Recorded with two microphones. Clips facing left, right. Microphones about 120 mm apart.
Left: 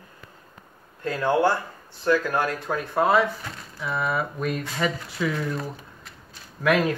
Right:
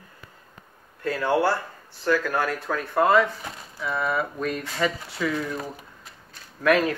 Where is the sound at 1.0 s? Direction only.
20° left (ahead or behind); by 5.4 s centre (ahead or behind).